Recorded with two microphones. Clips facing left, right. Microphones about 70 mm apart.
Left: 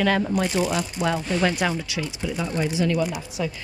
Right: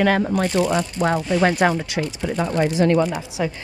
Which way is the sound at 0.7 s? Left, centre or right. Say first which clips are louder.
Right 4 dB; right.